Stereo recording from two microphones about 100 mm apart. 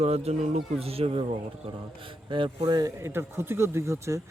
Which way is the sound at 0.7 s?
80° right.